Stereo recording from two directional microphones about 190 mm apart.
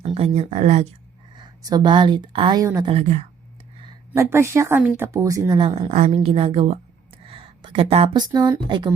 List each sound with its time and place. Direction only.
0.0 s speech: 30° right (ahead or behind)
1.4 s a woman's voice: 20° right (ahead or behind)
2.9 s speech: 40° right (ahead or behind)
4.1 s a woman's voice: 15° right (ahead or behind)